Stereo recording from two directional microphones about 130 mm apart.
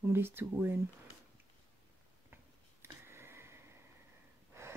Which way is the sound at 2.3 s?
20° right (ahead or behind).